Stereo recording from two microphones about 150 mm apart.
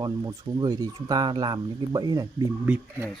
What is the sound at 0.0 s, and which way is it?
Speech, 25° right (ahead or behind).